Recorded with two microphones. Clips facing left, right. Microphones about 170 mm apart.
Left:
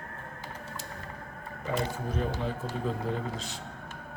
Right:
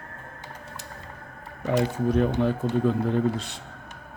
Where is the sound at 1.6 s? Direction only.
75° right (ahead or behind).